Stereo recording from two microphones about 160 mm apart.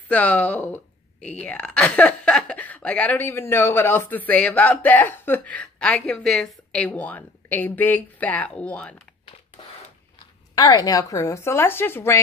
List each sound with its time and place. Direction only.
0.1 s speech: 10° left (ahead or behind)
10.5 s a woman's voice: 25° left (ahead or behind)